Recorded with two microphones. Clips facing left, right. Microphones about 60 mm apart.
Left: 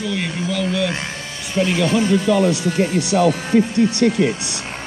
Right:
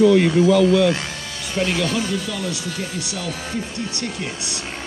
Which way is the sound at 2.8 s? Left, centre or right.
Left.